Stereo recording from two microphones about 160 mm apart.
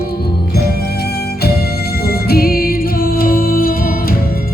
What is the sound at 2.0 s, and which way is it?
Music, 70° left (ahead or behind).